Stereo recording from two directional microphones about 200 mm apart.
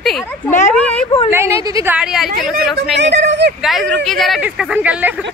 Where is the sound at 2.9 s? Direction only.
60° right (ahead or behind).